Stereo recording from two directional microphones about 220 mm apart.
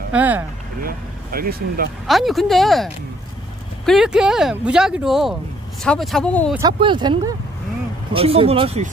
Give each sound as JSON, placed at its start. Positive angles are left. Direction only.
{"t": 0.1, "sound": "speech", "side_deg": -5}
{"t": 0.8, "sound": "speech", "side_deg": -40}
{"t": 2.0, "sound": "speech", "side_deg": 0}
{"t": 6.8, "sound": "speech", "side_deg": -20}